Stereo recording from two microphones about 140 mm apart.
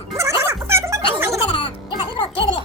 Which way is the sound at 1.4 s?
40° left (ahead or behind).